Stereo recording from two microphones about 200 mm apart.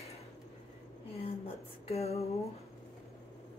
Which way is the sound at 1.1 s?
30° left (ahead or behind).